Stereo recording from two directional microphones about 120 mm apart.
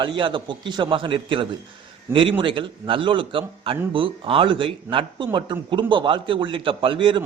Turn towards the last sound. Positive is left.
turn(degrees=-45)  # may be behind; listen again after turning